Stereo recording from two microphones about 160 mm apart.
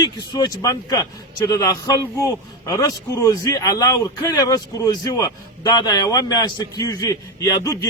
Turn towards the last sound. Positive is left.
turn(degrees=20)  # may be behind; listen again after turning